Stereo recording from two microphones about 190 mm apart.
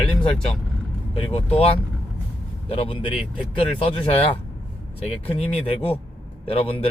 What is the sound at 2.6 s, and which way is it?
Speech, 30° left (ahead or behind).